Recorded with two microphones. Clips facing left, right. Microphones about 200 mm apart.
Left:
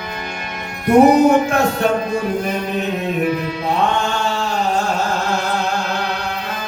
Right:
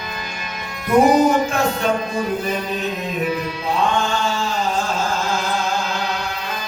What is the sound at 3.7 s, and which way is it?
Chant, 65° left (ahead or behind).